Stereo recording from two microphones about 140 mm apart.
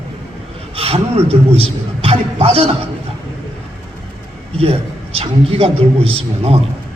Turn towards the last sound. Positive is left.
turn(degrees=-45)  # may be behind; listen again after turning